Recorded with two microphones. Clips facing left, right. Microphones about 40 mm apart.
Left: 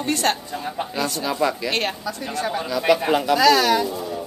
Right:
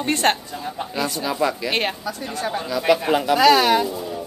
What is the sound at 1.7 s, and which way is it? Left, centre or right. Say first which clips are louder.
Speech: right 1 dB; centre.